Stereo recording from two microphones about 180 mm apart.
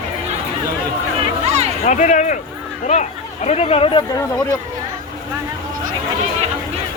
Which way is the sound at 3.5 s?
35° left (ahead or behind).